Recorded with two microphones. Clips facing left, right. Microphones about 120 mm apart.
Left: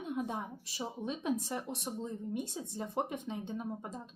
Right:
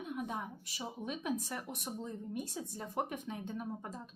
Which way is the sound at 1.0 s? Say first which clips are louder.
Left 3 dB; 25° left (ahead or behind).